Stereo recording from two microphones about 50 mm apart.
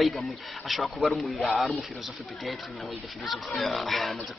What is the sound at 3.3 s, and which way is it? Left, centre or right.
Speech, centre.